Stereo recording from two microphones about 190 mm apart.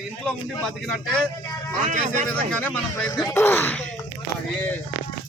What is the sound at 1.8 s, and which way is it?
Speech, 40° right (ahead or behind).